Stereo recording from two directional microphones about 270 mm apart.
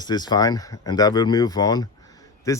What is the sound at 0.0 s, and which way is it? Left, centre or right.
Speech, centre.